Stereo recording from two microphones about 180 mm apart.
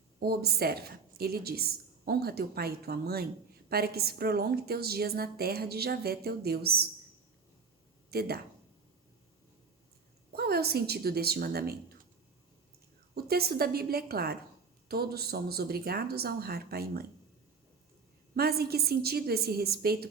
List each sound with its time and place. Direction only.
0.2 s a woman's voice: 60° right (ahead or behind)
8.1 s a woman's voice: 60° right (ahead or behind)
10.3 s a woman's voice: 60° right (ahead or behind)
13.1 s a woman's voice: 60° right (ahead or behind)
18.3 s a woman's voice: 60° right (ahead or behind)